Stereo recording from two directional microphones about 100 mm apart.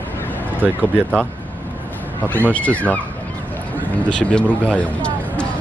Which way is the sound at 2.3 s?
15° left (ahead or behind).